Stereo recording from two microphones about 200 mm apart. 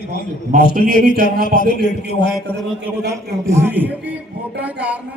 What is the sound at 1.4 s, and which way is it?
Speech, 45° left (ahead or behind).